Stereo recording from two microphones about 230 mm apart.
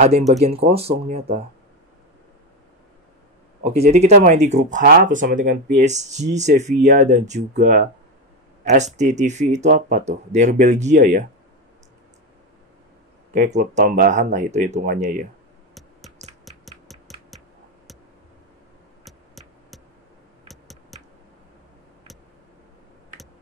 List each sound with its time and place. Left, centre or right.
0.4 s speech: right
3.6 s speech: right
13.3 s speech: right
15.7 s a sound: centre
16.4 s music: centre
19.0 s a sound: centre